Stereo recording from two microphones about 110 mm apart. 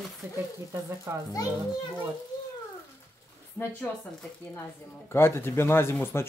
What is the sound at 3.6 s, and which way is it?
Speech, 20° left (ahead or behind).